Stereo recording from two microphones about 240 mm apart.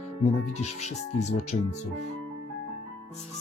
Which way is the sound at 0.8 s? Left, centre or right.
Left.